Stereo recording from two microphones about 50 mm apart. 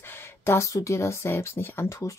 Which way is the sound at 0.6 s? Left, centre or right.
Left.